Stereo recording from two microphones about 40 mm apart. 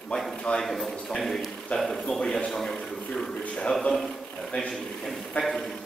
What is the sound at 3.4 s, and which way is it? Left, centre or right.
Speech, left.